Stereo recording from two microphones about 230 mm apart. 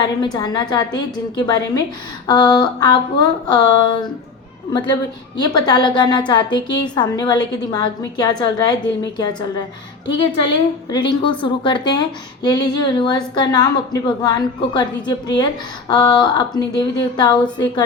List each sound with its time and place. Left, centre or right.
0.3 s a woman's voice: centre